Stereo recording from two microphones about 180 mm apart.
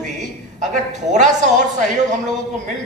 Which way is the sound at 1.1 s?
40° right (ahead or behind).